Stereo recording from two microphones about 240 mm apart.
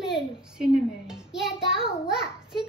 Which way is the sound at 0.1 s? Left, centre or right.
Centre.